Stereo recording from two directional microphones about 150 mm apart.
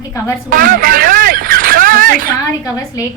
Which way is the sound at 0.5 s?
65° right (ahead or behind).